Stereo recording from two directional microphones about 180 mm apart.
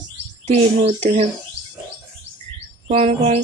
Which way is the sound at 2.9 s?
35° right (ahead or behind).